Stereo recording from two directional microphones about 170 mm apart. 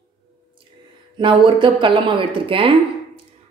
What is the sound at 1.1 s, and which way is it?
Speech, 30° right (ahead or behind).